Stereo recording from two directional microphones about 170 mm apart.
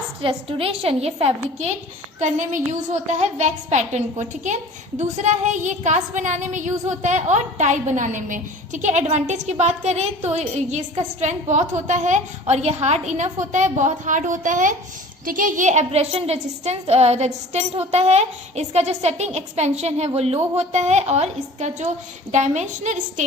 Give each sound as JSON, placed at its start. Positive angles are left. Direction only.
{"t": 0.2, "sound": "a woman's voice", "side_deg": -35}